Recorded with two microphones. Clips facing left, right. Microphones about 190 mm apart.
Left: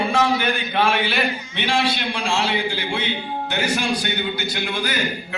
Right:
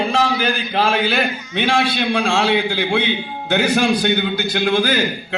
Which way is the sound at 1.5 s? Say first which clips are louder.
Right 5 dB; 55° right (ahead or behind).